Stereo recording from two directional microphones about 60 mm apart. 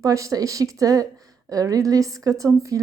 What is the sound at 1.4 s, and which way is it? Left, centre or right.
A woman's voice, right.